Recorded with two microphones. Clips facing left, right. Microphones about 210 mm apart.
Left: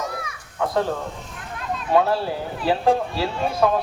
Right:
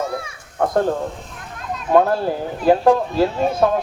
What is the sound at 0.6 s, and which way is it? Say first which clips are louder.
Speech: right 4 dB; 50° right (ahead or behind).